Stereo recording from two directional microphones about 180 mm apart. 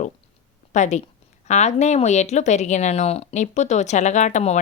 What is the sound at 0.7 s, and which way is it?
A woman's voice, 40° left (ahead or behind).